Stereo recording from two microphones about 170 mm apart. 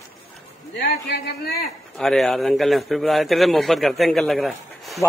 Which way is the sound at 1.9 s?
Centre (ahead or behind).